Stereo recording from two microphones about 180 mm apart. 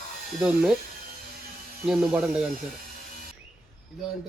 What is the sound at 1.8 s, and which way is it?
Speech, 5° right (ahead or behind).